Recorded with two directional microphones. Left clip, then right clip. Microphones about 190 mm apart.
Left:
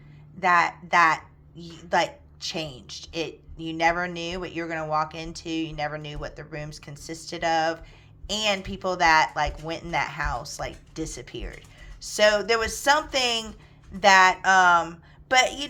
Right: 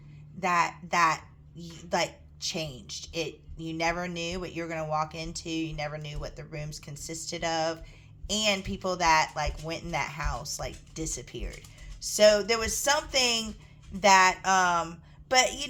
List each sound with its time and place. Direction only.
0.3 s a woman's voice: 20° left (ahead or behind)